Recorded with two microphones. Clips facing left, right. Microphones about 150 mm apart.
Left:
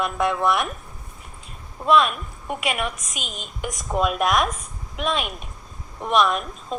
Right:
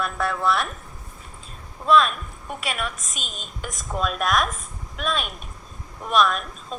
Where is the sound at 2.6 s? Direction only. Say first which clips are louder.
Left 3 dB; 15° left (ahead or behind).